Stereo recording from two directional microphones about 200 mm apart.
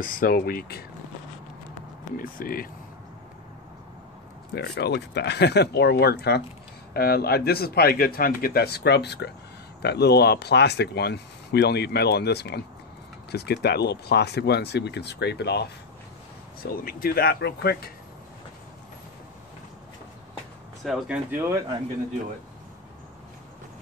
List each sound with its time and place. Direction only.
0.0 s speech: 45° left (ahead or behind)
2.1 s speech: 45° left (ahead or behind)
4.6 s speech: 55° left (ahead or behind)
16.7 s speech: 50° left (ahead or behind)
20.8 s speech: centre (ahead or behind)
21.3 s speech: 10° right (ahead or behind)